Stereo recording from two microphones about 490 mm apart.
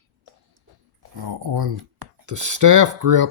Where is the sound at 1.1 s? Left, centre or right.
Right.